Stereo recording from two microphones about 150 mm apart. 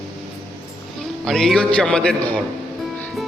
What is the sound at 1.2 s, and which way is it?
A man's voice, centre (ahead or behind).